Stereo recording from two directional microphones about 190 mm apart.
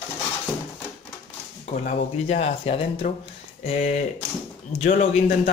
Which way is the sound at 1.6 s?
35° left (ahead or behind).